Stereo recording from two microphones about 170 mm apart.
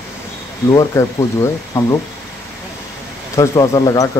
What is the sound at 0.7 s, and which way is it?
Speech, 20° left (ahead or behind).